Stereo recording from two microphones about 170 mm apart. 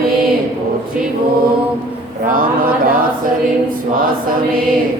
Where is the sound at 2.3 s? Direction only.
55° right (ahead or behind).